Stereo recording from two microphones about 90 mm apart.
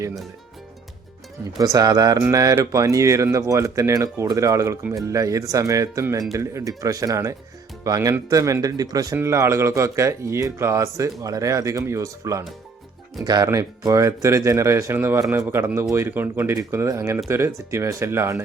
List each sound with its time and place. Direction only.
1.5 s speech: 45° right (ahead or behind)
9.1 s speech: 30° right (ahead or behind)
13.2 s speech: 45° right (ahead or behind)
13.5 s speech: 35° right (ahead or behind)